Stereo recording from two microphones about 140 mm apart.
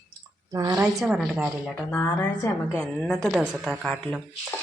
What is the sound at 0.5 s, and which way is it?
Speech, 25° right (ahead or behind).